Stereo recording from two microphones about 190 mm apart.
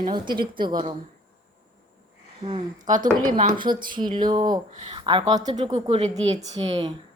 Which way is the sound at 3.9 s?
25° right (ahead or behind).